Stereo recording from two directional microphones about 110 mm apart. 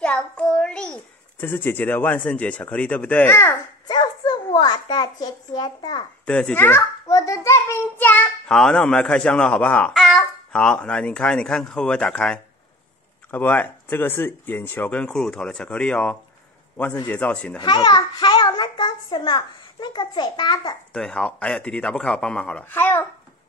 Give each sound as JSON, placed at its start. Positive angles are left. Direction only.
{"t": 0.0, "sound": "child singing", "side_deg": 10}
{"t": 1.4, "sound": "speech", "side_deg": 20}
{"t": 3.3, "sound": "a child's voice", "side_deg": 25}
{"t": 3.9, "sound": "a child's voice", "side_deg": 40}
{"t": 6.2, "sound": "speech", "side_deg": 10}
{"t": 7.1, "sound": "child singing", "side_deg": 30}
{"t": 8.5, "sound": "speech", "side_deg": 5}
{"t": 9.9, "sound": "babbling", "side_deg": 0}
{"t": 10.5, "sound": "a man's voice", "side_deg": 10}
{"t": 17.6, "sound": "a child's voice", "side_deg": 40}
{"t": 20.9, "sound": "speech", "side_deg": 5}